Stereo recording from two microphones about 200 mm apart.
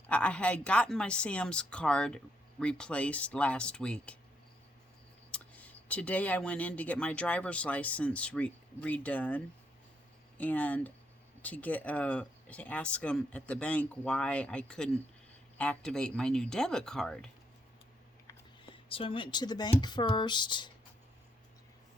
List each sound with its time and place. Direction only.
0.1 s speech: 5° left (ahead or behind)
5.3 s speech: 5° left (ahead or behind)
18.6 s speech: 25° left (ahead or behind)